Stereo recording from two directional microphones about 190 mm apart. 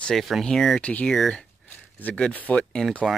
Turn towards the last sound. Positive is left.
turn(degrees=0)  # may be behind; listen again after turning